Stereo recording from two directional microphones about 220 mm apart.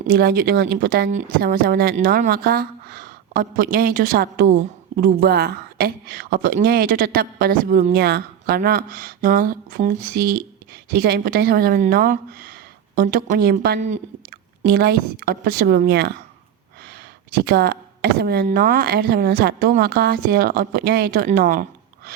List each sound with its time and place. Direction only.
0.1 s speech: 45° right (ahead or behind)
17.3 s speech: 45° right (ahead or behind)